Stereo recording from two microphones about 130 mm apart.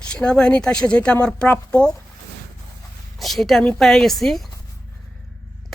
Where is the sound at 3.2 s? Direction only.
Centre (ahead or behind).